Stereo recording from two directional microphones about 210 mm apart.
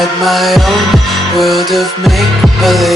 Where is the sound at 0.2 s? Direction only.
Centre (ahead or behind).